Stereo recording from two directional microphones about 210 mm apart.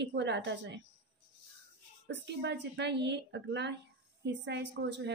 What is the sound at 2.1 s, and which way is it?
A woman's voice, 55° right (ahead or behind).